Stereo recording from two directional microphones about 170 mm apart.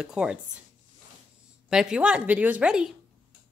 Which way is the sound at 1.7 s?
5° right (ahead or behind).